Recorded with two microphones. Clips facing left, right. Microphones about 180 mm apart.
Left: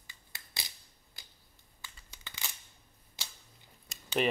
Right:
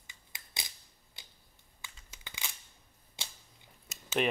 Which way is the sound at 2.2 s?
15° right (ahead or behind).